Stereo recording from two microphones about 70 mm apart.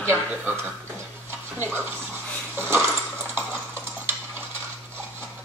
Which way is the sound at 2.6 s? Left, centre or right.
Right.